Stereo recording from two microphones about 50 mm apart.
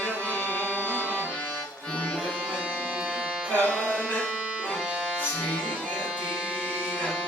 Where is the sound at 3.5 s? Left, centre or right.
Left.